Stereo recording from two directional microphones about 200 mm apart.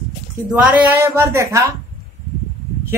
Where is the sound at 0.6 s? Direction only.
5° right (ahead or behind).